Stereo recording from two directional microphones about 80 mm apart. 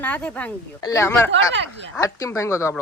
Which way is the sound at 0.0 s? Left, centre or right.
Centre.